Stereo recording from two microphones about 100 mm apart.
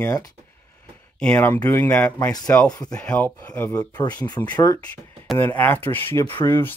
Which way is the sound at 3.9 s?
45° left (ahead or behind).